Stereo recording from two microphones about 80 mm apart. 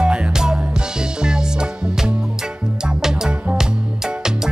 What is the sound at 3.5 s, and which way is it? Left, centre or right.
Music, centre.